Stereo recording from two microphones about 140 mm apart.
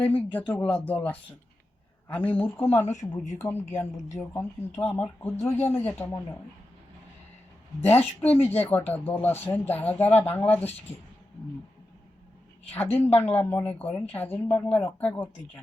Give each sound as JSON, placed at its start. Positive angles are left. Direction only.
{"t": 0.0, "sound": "a woman's voice", "side_deg": 15}
{"t": 7.8, "sound": "speech", "side_deg": 15}
{"t": 12.7, "sound": "speech", "side_deg": 15}
{"t": 13.0, "sound": "speech", "side_deg": 45}
{"t": 13.2, "sound": "speech", "side_deg": 15}